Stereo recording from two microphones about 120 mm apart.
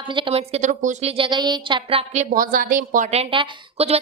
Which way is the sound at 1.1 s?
45° right (ahead or behind).